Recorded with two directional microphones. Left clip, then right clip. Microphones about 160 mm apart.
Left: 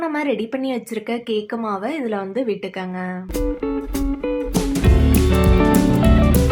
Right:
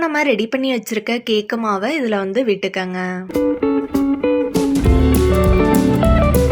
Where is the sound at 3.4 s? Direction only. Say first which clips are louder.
Right 7 dB; centre (ahead or behind).